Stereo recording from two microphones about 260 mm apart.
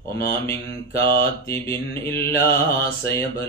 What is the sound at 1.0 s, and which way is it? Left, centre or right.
A man's voice, centre.